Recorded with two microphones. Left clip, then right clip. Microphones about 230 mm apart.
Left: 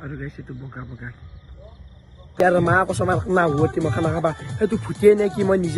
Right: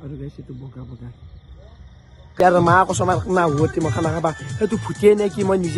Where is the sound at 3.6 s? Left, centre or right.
Left.